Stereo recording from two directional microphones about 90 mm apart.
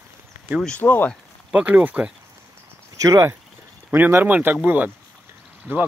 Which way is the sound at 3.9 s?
20° right (ahead or behind).